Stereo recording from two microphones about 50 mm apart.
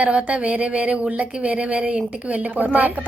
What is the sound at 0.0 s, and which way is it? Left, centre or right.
A woman's voice, right.